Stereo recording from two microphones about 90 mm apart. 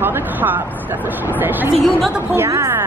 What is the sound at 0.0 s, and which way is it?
Vehicle, 20° right (ahead or behind).